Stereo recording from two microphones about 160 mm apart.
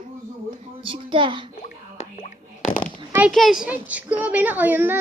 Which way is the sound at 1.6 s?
50° left (ahead or behind).